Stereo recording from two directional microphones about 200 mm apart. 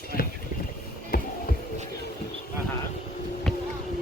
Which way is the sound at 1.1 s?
50° left (ahead or behind).